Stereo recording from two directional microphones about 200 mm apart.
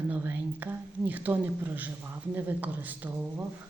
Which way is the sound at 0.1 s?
10° right (ahead or behind).